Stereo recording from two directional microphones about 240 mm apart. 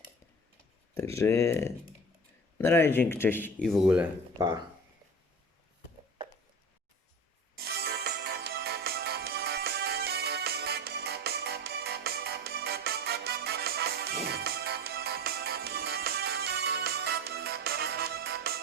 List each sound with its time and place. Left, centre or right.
0.9 s speech: centre
3.7 s speech: centre
7.5 s music: right